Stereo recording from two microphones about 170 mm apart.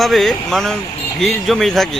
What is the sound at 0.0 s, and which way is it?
Speech, centre (ahead or behind).